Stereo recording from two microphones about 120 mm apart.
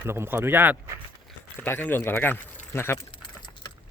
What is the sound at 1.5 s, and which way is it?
Speech, 15° left (ahead or behind).